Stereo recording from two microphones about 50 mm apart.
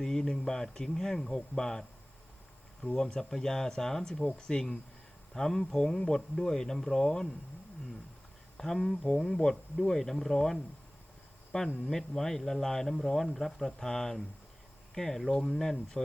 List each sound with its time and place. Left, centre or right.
0.0 s speech: centre
2.8 s speech: centre
8.5 s speech: centre
11.5 s speech: left
11.9 s speech: centre